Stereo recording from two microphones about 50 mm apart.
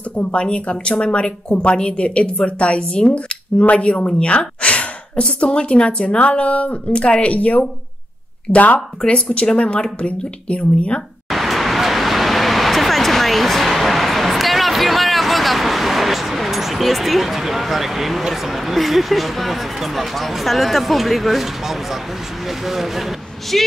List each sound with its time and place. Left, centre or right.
0.2 s speech: left
11.2 s vehicle: centre
22.7 s speech: centre